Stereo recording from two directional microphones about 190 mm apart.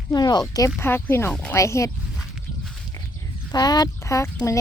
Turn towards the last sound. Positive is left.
turn(degrees=15)  # may be behind; listen again after turning